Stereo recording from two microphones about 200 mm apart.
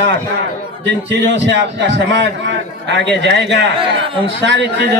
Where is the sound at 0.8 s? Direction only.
60° right (ahead or behind).